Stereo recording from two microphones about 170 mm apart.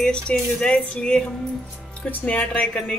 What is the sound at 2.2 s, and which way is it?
Speech, 10° left (ahead or behind).